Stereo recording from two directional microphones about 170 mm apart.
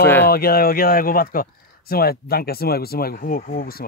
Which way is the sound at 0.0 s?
10° left (ahead or behind).